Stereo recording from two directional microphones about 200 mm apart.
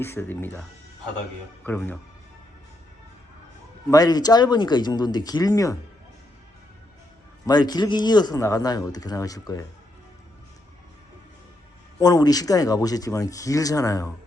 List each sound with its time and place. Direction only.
0.0 s speech: 10° left (ahead or behind)
1.6 s speech: 10° left (ahead or behind)
3.8 s speech: 20° left (ahead or behind)
7.4 s speech: 20° left (ahead or behind)
11.9 s speech: 20° left (ahead or behind)